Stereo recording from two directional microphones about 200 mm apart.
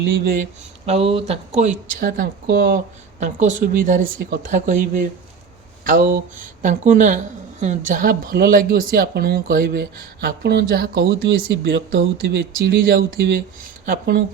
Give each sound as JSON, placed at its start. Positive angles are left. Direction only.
{"t": 0.1, "sound": "speech", "side_deg": -45}
{"t": 0.9, "sound": "speech", "side_deg": -30}